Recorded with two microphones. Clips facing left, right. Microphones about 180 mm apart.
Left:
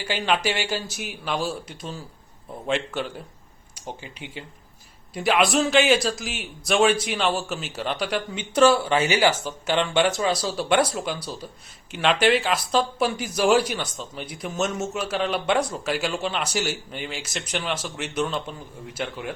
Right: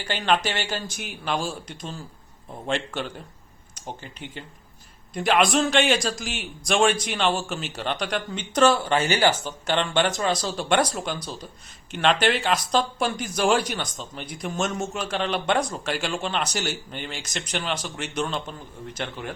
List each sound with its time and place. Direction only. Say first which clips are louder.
0.0 s a man's voice: even; 10° left (ahead or behind)